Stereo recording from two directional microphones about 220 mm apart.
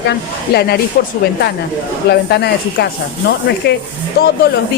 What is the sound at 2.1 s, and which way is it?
Speech, 50° left (ahead or behind).